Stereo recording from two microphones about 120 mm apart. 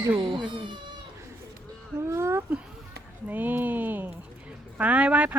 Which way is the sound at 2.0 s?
25° right (ahead or behind).